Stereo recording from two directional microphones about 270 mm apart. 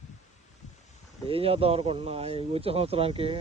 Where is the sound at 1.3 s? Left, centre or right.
Right.